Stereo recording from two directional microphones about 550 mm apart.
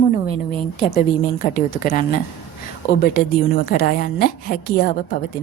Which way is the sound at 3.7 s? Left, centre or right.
Centre.